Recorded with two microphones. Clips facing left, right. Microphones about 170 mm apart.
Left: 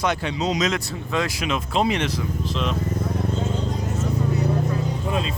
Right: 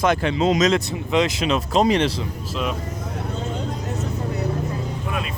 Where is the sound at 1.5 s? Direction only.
40° right (ahead or behind).